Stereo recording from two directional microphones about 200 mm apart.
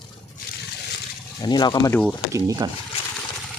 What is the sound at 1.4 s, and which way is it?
Speech, 20° left (ahead or behind).